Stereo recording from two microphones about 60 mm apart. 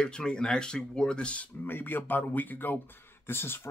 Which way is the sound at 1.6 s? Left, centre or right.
Left.